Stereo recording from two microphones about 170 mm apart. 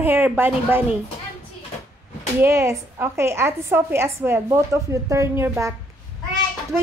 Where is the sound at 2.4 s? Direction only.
15° right (ahead or behind).